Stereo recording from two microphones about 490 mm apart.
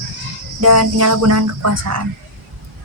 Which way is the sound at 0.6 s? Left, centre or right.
Right.